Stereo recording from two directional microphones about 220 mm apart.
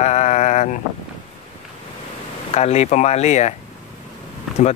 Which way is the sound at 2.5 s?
30° left (ahead or behind).